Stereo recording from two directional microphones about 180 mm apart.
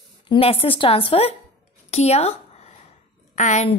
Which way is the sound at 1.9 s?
35° left (ahead or behind).